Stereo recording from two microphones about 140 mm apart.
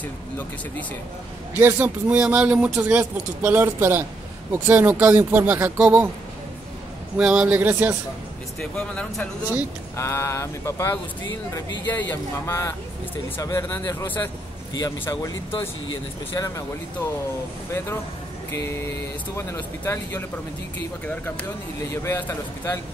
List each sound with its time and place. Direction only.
1.6 s speech: 15° right (ahead or behind)
7.2 s speech: 5° right (ahead or behind)
8.5 s speech: 5° left (ahead or behind)
9.9 s speech: 20° left (ahead or behind)
14.7 s speech: 25° left (ahead or behind)
19.3 s speech: 20° left (ahead or behind)
21.9 s speech: 20° left (ahead or behind)